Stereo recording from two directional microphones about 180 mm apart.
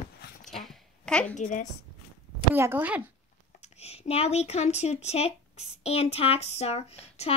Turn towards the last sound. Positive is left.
turn(degrees=35)  # may be behind; listen again after turning